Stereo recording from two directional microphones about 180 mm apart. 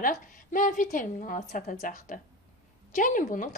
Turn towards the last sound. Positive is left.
turn(degrees=45)  # may be behind; listen again after turning